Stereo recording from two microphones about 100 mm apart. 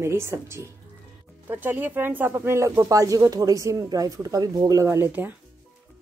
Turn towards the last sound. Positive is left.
turn(degrees=-25)  # may be behind; listen again after turning